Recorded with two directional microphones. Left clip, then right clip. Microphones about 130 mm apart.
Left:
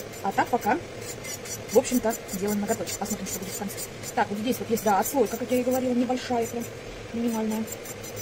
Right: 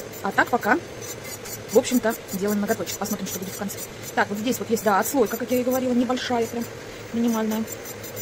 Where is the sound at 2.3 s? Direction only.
15° right (ahead or behind).